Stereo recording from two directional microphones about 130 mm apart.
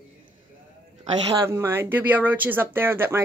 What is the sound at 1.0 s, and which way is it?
Speech, 30° right (ahead or behind).